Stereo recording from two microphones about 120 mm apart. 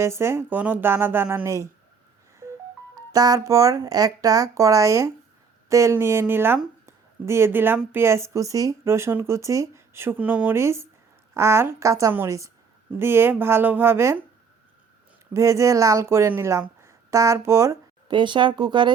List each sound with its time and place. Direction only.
0.0 s speech: 20° right (ahead or behind)
3.1 s speech: 30° right (ahead or behind)
6.8 s a sound: 20° right (ahead or behind)
7.9 s speech: 20° right (ahead or behind)
15.3 s speech: 25° right (ahead or behind)
18.1 s speech: 40° right (ahead or behind)